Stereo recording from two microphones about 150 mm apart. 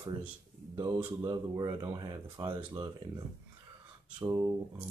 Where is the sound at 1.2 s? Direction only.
25° right (ahead or behind).